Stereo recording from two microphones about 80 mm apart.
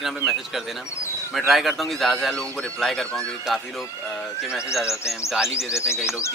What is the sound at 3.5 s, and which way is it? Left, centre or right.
Speech, centre.